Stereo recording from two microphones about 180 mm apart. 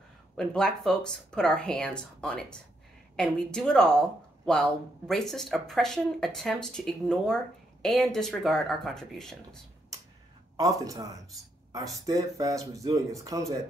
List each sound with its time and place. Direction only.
0.4 s speech: 5° left (ahead or behind)
10.5 s speech: 20° right (ahead or behind)